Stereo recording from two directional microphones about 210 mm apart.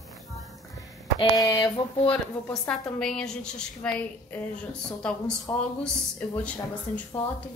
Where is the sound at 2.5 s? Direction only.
5° left (ahead or behind).